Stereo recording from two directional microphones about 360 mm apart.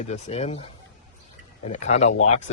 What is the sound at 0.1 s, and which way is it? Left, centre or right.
Speech, centre.